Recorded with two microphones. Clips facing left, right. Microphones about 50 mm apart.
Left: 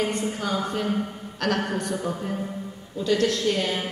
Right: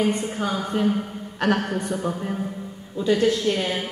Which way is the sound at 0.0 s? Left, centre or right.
Centre.